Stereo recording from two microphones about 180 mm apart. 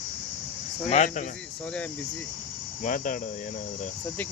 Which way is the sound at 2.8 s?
45° left (ahead or behind).